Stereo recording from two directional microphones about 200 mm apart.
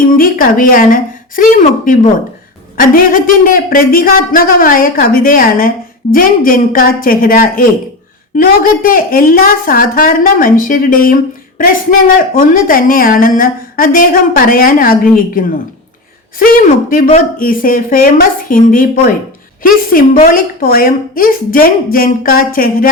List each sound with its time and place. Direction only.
0.1 s a woman's voice: 45° left (ahead or behind)
17.1 s a woman's voice: 45° left (ahead or behind)